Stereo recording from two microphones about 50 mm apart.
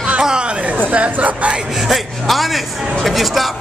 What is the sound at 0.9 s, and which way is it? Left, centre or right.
Speech, right.